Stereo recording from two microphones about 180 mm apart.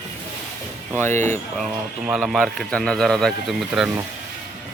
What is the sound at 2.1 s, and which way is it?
Speech, 5° right (ahead or behind).